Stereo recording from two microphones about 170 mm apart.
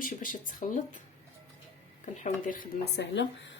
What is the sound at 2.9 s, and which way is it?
Speech, 90° left.